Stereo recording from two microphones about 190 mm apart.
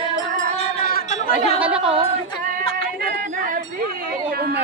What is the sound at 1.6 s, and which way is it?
Speech, 5° right (ahead or behind).